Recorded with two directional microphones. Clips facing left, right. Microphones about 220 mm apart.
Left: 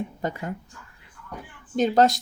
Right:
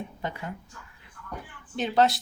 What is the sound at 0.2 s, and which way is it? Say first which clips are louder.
Speech: left 3 dB; 45° left (ahead or behind).